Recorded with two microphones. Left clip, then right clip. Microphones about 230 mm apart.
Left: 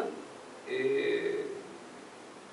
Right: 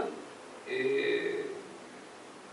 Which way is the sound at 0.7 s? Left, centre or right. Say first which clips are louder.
Even; centre.